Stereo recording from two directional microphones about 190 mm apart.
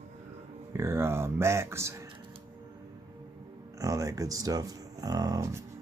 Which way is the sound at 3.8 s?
15° right (ahead or behind).